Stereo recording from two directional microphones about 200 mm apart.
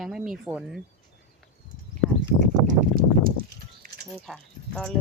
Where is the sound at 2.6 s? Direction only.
45° right (ahead or behind).